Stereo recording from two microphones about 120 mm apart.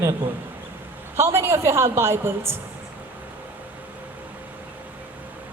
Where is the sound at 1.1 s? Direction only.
20° right (ahead or behind).